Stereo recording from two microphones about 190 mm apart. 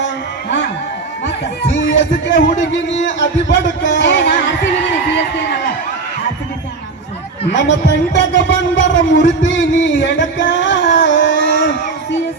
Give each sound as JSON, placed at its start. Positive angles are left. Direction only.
{"t": 2.0, "sound": "a man's voice", "side_deg": 75}
{"t": 7.5, "sound": "a man's voice", "side_deg": 70}
{"t": 9.6, "sound": "music", "side_deg": 80}